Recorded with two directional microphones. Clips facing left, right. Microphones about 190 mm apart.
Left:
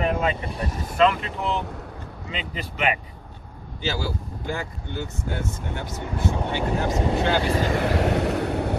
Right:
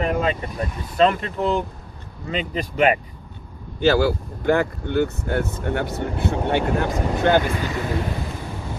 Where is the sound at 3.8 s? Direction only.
60° right (ahead or behind).